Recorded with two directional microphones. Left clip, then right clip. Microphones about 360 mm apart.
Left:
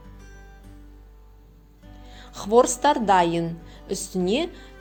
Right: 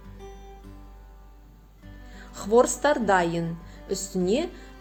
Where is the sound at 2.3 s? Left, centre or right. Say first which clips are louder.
Left 2 dB; centre.